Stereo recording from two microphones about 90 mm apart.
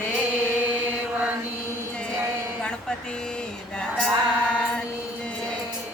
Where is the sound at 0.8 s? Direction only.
20° right (ahead or behind).